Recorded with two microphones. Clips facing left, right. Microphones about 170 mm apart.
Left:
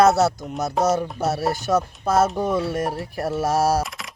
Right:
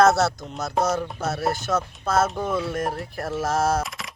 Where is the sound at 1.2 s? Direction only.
40° left (ahead or behind).